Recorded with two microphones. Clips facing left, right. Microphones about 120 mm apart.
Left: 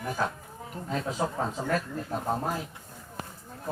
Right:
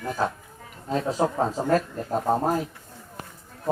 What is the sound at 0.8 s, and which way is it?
Speech, 35° right (ahead or behind).